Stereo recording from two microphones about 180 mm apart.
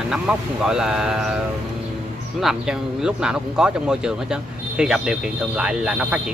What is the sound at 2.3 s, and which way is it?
Speech, 5° right (ahead or behind).